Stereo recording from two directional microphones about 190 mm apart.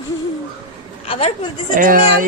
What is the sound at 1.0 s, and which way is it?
Speech, 30° left (ahead or behind).